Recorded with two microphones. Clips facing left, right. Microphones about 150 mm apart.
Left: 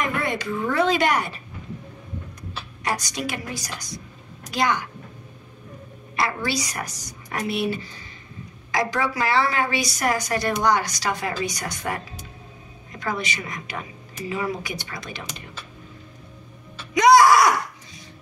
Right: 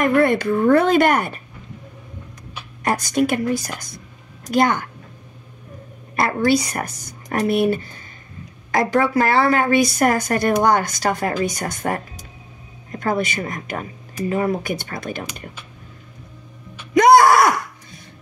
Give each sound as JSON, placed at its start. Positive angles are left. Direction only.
{"t": 0.0, "sound": "a woman's voice", "side_deg": -55}
{"t": 2.8, "sound": "a woman's voice", "side_deg": -50}
{"t": 6.1, "sound": "a woman's voice", "side_deg": -50}
{"t": 16.9, "sound": "groan", "side_deg": -55}